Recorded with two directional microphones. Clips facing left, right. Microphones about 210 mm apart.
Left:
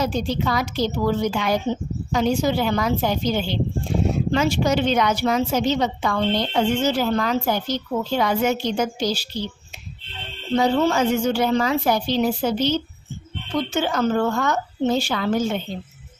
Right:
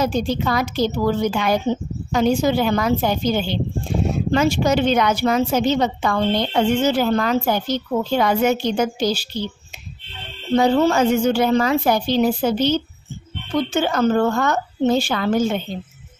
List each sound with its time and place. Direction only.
0.0 s a woman's voice: 50° right (ahead or behind)
10.5 s a woman's voice: 55° right (ahead or behind)
13.7 s a woman's voice: 55° right (ahead or behind)